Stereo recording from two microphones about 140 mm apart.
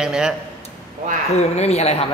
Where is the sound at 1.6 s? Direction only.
50° left (ahead or behind).